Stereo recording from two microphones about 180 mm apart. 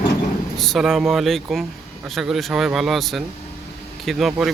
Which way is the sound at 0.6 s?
Centre (ahead or behind).